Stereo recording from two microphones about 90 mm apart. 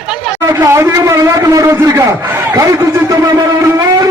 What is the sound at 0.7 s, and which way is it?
A man's voice, 35° right (ahead or behind).